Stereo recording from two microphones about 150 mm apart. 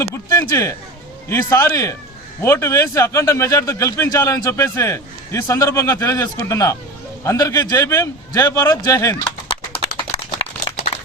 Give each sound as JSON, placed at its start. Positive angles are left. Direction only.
{"t": 0.0, "sound": "speech", "side_deg": 20}